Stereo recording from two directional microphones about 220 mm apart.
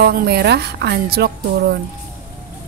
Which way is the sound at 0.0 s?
45° right (ahead or behind).